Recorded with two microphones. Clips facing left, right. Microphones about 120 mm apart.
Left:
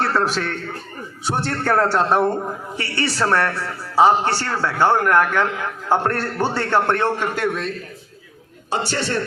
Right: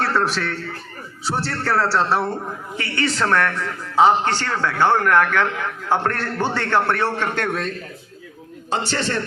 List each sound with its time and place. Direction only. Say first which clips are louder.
0.0 s a sound: left 1 dB; 5° left (ahead or behind)
0.3 s a man's voice: left 1 dB; 45° left (ahead or behind)
2.2 s a man's voice: left 5 dB; 15° left (ahead or behind)
7.3 s a man's voice: left 1 dB; centre (ahead or behind)
8.7 s a man's voice: even; 10° left (ahead or behind)